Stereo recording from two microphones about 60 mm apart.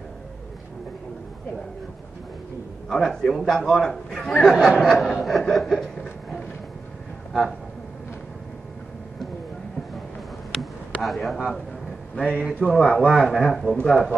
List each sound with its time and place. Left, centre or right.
2.9 s a man's voice: centre
5.0 s chuckle: centre
10.5 s a sound: centre
12.2 s a man's voice: centre
13.5 s chuckle: centre
13.8 s a man's voice: centre